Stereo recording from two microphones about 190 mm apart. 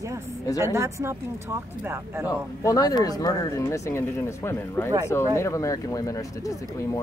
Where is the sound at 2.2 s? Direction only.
20° left (ahead or behind).